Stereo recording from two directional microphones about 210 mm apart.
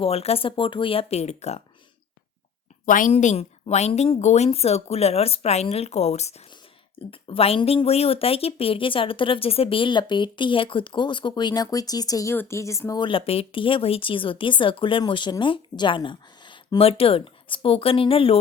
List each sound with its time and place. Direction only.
0.0 s speech: 30° left (ahead or behind)
2.8 s a woman's voice: 40° left (ahead or behind)